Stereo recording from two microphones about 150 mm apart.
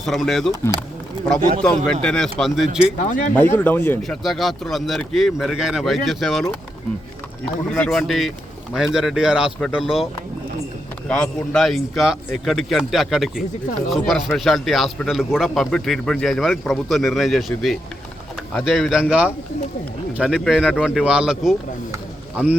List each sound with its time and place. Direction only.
0.0 s speech: centre (ahead or behind)
1.4 s a man's voice: 60° right (ahead or behind)
1.6 s speech: 5° left (ahead or behind)
3.0 s speech: 65° left (ahead or behind)
3.3 s speech: 15° left (ahead or behind)
4.0 s speech: centre (ahead or behind)
7.7 s speech: 5° left (ahead or behind)
11.1 s speech: centre (ahead or behind)
20.1 s speech: 5° right (ahead or behind)